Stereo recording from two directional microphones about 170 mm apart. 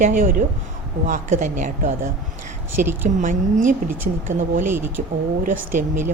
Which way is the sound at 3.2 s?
50° right (ahead or behind).